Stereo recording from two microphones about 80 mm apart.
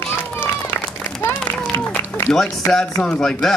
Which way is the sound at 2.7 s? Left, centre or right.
Centre.